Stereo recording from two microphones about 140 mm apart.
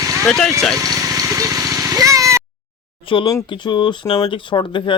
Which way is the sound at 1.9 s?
25° right (ahead or behind).